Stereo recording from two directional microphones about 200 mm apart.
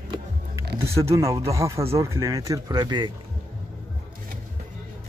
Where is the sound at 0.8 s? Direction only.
15° right (ahead or behind).